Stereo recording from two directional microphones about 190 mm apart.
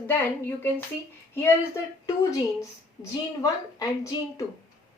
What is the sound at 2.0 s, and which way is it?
Speech, 15° left (ahead or behind).